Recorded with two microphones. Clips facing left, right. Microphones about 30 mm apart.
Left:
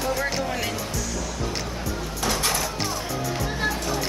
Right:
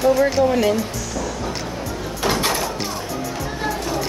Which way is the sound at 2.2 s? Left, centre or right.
Right.